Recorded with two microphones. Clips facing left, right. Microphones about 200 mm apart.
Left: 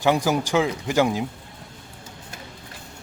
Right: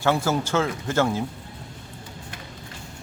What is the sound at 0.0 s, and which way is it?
Speech, 15° left (ahead or behind).